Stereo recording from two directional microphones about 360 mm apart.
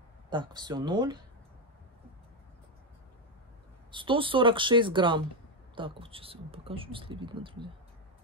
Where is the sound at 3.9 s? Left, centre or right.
Centre.